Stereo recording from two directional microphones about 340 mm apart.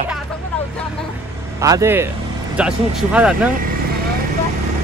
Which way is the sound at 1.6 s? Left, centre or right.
Centre.